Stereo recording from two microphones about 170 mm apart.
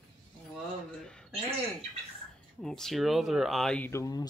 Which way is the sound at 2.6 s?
Centre (ahead or behind).